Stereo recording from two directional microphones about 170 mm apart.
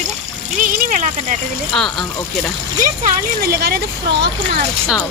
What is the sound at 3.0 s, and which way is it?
Speech, 65° right (ahead or behind).